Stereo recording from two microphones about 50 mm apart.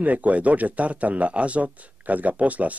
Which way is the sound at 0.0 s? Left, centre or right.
Right.